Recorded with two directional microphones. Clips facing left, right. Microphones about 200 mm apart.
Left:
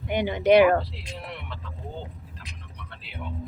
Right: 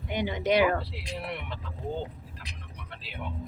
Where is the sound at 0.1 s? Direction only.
60° left (ahead or behind).